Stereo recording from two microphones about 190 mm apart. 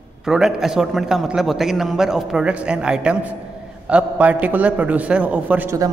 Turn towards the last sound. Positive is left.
turn(degrees=-15)  # may be behind; listen again after turning